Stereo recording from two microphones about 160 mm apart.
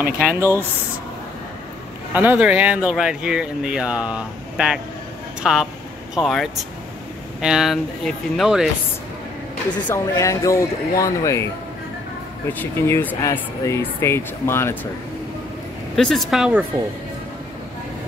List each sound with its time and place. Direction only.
0.0 s speech: 10° right (ahead or behind)
2.1 s speech: 10° right (ahead or behind)
9.8 s speech: 20° left (ahead or behind)
12.5 s speech: 15° left (ahead or behind)
16.0 s speech: centre (ahead or behind)